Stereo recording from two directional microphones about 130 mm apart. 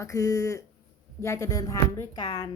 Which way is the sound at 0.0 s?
25° left (ahead or behind).